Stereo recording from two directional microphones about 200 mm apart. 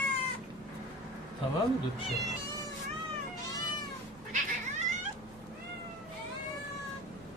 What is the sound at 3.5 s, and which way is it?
Cat, 20° left (ahead or behind).